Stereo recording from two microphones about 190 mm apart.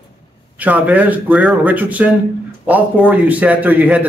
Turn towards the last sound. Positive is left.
turn(degrees=-10)  # may be behind; listen again after turning